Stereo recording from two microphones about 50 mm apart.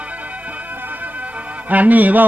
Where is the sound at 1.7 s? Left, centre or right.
Right.